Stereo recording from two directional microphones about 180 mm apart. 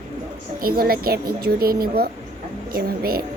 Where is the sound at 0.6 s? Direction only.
55° right (ahead or behind).